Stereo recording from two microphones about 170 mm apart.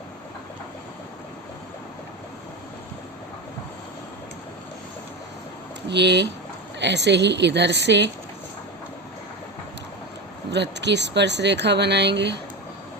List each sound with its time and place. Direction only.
5.9 s speech: 90° right
10.5 s speech: 90° right